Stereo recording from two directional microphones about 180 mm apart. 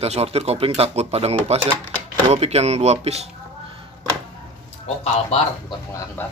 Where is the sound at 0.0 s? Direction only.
35° right (ahead or behind).